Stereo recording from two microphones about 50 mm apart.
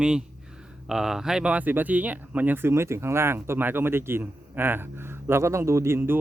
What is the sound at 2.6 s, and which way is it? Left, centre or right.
Speech, right.